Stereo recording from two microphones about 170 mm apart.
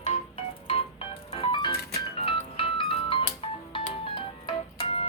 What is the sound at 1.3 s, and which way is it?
Music, 30° left (ahead or behind).